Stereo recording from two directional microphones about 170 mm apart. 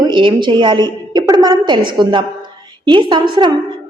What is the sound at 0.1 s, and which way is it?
A woman's voice, 30° right (ahead or behind).